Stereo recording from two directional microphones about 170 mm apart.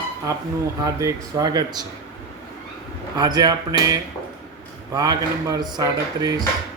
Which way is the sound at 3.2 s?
25° right (ahead or behind).